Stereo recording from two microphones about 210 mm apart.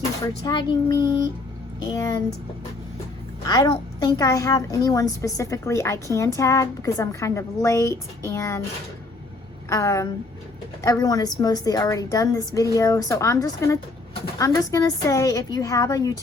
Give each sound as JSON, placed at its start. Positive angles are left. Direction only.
{"t": 0.4, "sound": "child singing", "side_deg": 20}
{"t": 1.9, "sound": "a woman's voice", "side_deg": 15}
{"t": 3.4, "sound": "a woman's voice", "side_deg": 20}
{"t": 9.6, "sound": "a woman's voice", "side_deg": 15}